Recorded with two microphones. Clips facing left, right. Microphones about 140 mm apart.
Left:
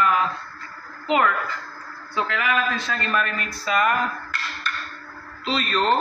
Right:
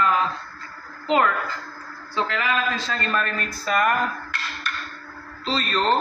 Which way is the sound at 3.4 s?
45° right (ahead or behind).